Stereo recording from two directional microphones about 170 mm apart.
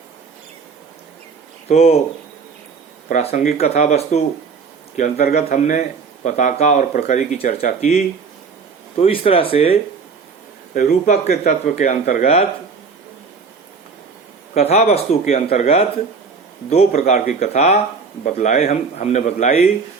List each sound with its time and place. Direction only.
1.6 s speech: 40° left (ahead or behind)
3.1 s speech: 40° left (ahead or behind)
4.9 s speech: 50° left (ahead or behind); by 9.7 s 35° left (ahead or behind)
10.8 s speech: 50° left (ahead or behind)
14.5 s speech: 40° left (ahead or behind)